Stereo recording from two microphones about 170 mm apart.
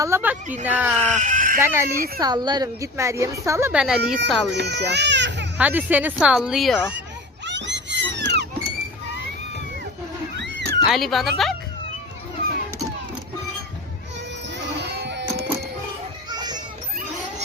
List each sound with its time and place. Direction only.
0.0 s a woman's voice: 10° right (ahead or behind)
1.2 s speech: 50° right (ahead or behind)
1.6 s a woman's voice: 15° right (ahead or behind)
3.7 s speech: 5° right (ahead or behind)
4.2 s speech: 85° right
5.5 s a woman's voice: 10° right (ahead or behind)
7.4 s a sound: 90° right
10.3 s cat: 90° right
10.8 s speech: centre (ahead or behind)
14.6 s music: 85° right
16.3 s children playing: 25° right (ahead or behind)